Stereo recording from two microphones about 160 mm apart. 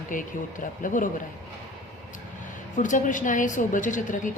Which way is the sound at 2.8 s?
55° left (ahead or behind).